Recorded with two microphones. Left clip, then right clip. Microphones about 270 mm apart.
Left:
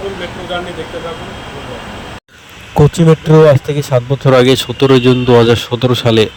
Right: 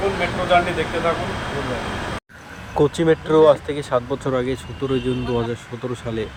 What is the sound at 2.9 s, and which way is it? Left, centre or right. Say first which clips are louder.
Speech: left 8 dB; left.